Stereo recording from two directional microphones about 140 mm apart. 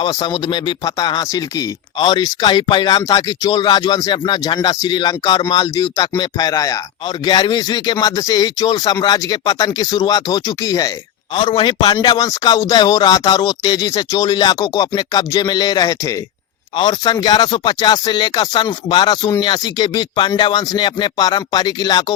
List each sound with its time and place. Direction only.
0.0 s speech: 30° left (ahead or behind)